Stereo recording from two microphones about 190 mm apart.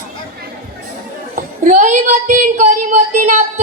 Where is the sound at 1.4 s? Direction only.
40° right (ahead or behind).